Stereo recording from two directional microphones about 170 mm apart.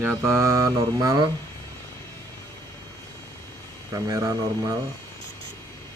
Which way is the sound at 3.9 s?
20° right (ahead or behind).